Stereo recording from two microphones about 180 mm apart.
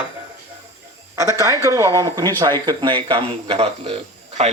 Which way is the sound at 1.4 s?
20° right (ahead or behind).